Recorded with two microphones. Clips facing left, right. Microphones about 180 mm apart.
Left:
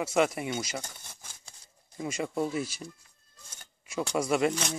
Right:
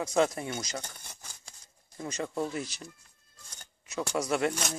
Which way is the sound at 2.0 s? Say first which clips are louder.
Left 2 dB; 15° left (ahead or behind).